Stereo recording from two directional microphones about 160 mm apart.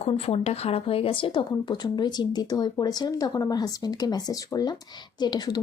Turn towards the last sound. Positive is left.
turn(degrees=25)  # may be behind; listen again after turning